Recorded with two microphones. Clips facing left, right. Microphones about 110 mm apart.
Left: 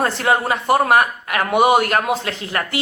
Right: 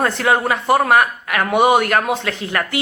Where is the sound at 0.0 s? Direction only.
30° left (ahead or behind).